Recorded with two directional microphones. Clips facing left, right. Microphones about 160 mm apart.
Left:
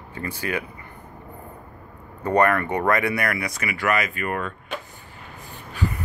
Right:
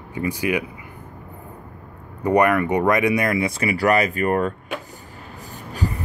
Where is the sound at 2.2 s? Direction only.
15° right (ahead or behind); by 4.5 s 40° right (ahead or behind).